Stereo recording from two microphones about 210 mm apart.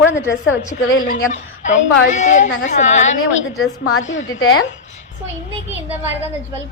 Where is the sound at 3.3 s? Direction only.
65° left (ahead or behind).